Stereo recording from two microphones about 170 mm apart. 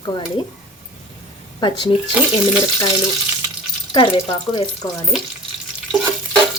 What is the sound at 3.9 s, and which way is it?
Speech, 30° left (ahead or behind).